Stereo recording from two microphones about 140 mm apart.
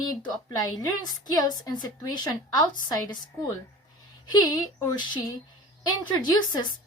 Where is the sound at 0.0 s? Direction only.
30° left (ahead or behind).